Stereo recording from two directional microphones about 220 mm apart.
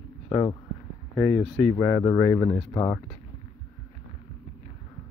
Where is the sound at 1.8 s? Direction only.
15° left (ahead or behind).